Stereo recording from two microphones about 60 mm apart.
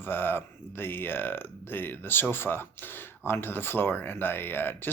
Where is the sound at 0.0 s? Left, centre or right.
Left.